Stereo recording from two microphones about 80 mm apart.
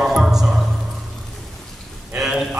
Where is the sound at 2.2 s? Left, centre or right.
Centre.